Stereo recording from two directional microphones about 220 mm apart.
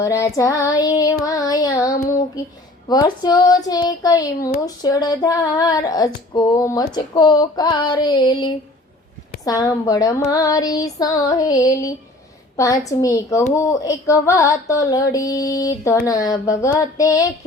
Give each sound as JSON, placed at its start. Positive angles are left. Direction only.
{"t": 0.0, "sound": "child singing", "side_deg": 15}
{"t": 6.3, "sound": "a sound", "side_deg": 15}
{"t": 9.4, "sound": "child singing", "side_deg": 15}